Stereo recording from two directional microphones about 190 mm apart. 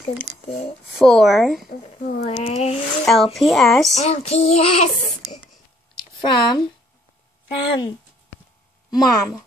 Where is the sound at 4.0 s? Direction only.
35° left (ahead or behind).